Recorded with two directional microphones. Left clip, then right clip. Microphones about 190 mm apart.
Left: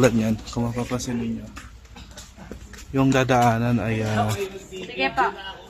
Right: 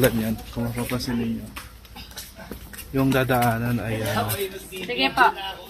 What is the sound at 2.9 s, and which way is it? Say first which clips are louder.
Speech: left 2 dB; 30° left (ahead or behind).